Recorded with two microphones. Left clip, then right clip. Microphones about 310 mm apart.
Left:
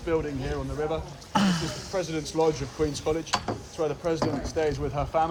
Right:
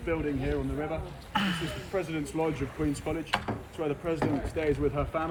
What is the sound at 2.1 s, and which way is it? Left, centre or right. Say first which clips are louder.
Speech: left 6 dB; centre.